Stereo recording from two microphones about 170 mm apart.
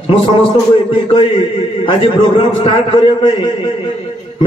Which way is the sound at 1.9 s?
30° left (ahead or behind).